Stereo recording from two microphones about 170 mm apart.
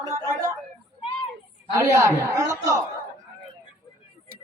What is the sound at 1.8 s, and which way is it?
Music, 15° right (ahead or behind).